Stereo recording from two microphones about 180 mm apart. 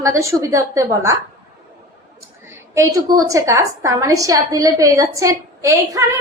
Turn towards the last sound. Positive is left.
turn(degrees=-15)  # may be behind; listen again after turning